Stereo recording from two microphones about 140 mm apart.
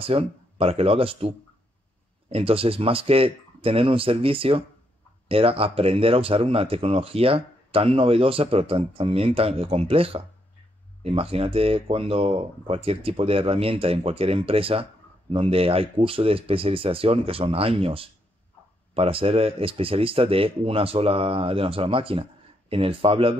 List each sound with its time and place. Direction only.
0.0 s speech: 40° right (ahead or behind)